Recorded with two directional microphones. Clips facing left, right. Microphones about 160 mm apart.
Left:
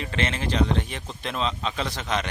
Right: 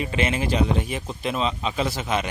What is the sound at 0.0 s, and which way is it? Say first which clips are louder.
Speech: right 4 dB; 10° right (ahead or behind).